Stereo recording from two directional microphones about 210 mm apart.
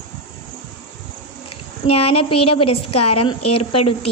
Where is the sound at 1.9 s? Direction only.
25° left (ahead or behind).